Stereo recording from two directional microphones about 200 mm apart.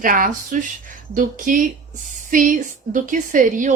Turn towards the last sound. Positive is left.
turn(degrees=-40)  # may be behind; listen again after turning